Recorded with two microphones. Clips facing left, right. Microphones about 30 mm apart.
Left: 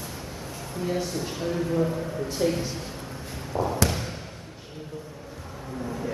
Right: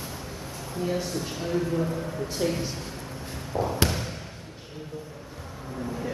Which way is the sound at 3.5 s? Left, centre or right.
Centre.